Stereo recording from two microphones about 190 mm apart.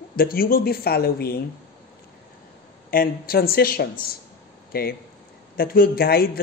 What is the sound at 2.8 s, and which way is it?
Speech, 50° left (ahead or behind).